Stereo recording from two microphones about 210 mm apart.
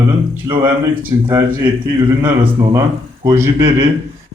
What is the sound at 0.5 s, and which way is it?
Speech, 15° right (ahead or behind).